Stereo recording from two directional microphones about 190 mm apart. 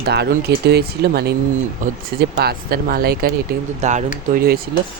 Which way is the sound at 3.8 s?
40° right (ahead or behind).